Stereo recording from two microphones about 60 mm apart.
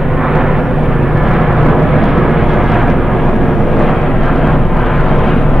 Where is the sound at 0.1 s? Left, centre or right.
Centre.